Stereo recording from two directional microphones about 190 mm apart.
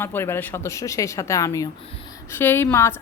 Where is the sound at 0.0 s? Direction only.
10° left (ahead or behind).